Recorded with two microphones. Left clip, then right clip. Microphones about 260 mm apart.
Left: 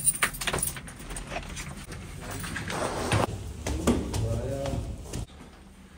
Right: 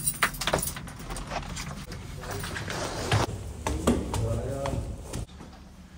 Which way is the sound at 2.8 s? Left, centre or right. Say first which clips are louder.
Left 5 dB; left.